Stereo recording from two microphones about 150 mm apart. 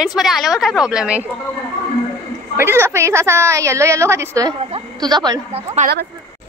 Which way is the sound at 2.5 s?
15° right (ahead or behind).